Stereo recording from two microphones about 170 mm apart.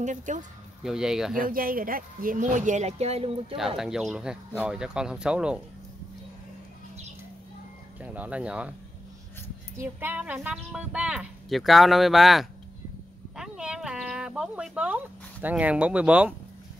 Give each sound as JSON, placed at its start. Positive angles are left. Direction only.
{"t": 0.0, "sound": "speech", "side_deg": -45}
{"t": 0.8, "sound": "speech", "side_deg": -5}
{"t": 1.4, "sound": "speech", "side_deg": -55}
{"t": 3.5, "sound": "speech", "side_deg": 0}
{"t": 8.0, "sound": "speech", "side_deg": -10}
{"t": 9.8, "sound": "speech", "side_deg": -10}
{"t": 13.4, "sound": "a sound", "side_deg": -5}
{"t": 15.4, "sound": "speech", "side_deg": -10}